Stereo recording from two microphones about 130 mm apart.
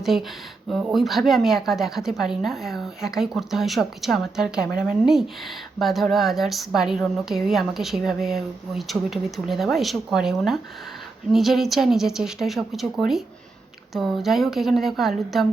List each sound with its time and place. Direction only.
0.0 s speech: centre (ahead or behind)